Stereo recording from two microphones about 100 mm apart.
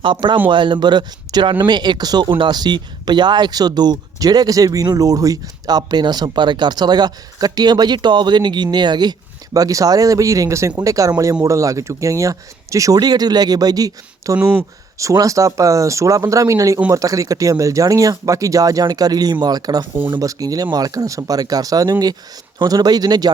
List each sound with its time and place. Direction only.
0.0 s speech: 50° right (ahead or behind)
14.3 s speech: 15° right (ahead or behind)
14.9 s speech: 35° right (ahead or behind)